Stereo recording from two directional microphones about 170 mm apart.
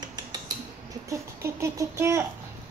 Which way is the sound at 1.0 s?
15° right (ahead or behind).